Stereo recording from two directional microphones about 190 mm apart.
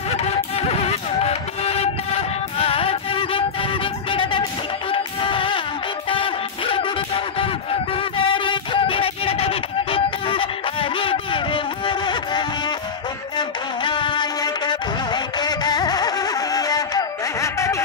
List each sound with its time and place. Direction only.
0.2 s music: 35° left (ahead or behind)
8.3 s music: 25° left (ahead or behind)